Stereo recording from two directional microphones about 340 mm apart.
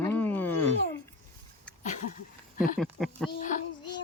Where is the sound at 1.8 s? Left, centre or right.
Left.